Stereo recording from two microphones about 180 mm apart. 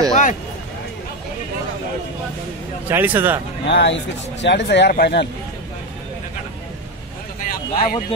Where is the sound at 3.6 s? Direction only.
75° left (ahead or behind).